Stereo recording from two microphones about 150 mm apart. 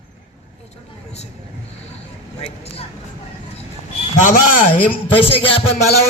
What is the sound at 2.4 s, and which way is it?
Speech, 40° left (ahead or behind).